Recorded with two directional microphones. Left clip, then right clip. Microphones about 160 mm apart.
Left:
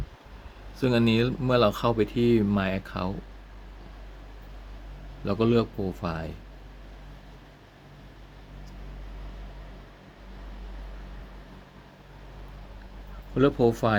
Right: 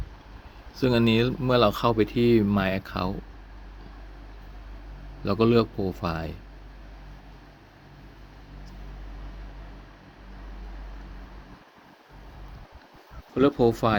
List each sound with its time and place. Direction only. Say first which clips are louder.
0.8 s speech: right 2 dB; 15° right (ahead or behind)
5.2 s speech: right 3 dB; 15° right (ahead or behind)
13.3 s speech: right 1 dB; 15° right (ahead or behind)